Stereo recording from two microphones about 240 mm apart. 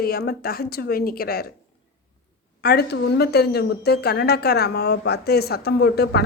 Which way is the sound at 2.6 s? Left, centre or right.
Left.